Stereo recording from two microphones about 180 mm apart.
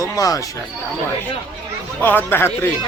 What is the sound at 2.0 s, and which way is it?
Speech, 10° left (ahead or behind).